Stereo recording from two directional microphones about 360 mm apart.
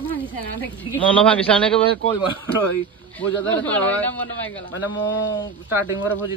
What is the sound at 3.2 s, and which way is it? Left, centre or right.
A man's voice, centre.